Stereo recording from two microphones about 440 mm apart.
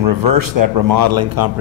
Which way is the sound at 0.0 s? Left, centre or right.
Right.